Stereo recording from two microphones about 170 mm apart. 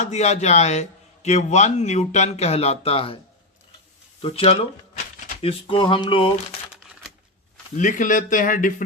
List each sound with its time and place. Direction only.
0.0 s a man's voice: 40° left (ahead or behind)
4.2 s a man's voice: 35° left (ahead or behind)
7.8 s speech: 50° left (ahead or behind)